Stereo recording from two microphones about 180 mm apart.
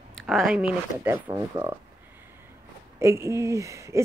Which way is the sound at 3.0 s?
15° right (ahead or behind).